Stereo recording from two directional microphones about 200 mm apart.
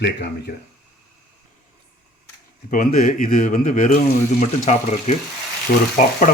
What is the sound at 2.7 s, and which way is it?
Speech, 45° left (ahead or behind).